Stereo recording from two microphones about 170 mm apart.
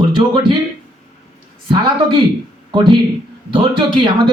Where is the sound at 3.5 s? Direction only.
30° right (ahead or behind).